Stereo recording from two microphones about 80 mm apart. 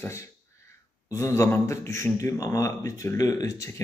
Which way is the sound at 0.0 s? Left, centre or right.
Left.